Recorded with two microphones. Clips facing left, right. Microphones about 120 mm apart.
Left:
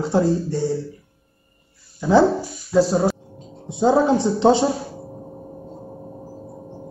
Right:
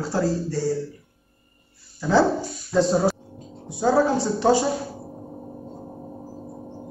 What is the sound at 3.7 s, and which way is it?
Speech, 20° left (ahead or behind).